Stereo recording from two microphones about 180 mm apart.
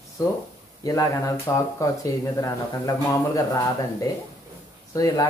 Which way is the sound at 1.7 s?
15° left (ahead or behind).